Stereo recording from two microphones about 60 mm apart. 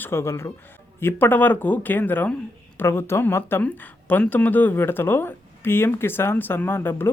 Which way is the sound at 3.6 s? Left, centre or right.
Left.